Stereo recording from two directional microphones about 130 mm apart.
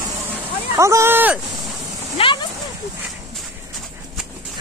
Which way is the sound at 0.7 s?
20° right (ahead or behind).